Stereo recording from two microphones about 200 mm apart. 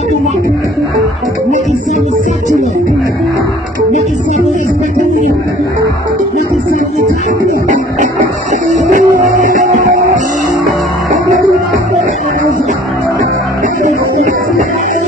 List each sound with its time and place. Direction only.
7.6 s music: 40° right (ahead or behind)